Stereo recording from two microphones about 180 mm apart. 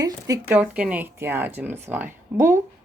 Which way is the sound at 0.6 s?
5° right (ahead or behind).